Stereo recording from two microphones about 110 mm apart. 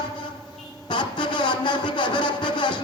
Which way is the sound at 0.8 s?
45° left (ahead or behind).